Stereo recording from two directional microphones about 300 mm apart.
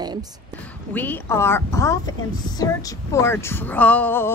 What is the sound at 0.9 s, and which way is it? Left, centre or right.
A woman's voice, centre.